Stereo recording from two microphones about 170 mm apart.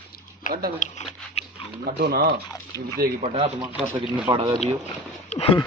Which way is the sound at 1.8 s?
65° right (ahead or behind).